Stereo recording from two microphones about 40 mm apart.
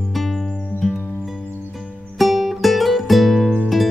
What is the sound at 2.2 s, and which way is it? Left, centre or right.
Music, centre.